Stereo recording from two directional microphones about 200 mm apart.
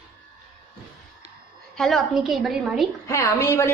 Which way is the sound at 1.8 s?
Centre (ahead or behind).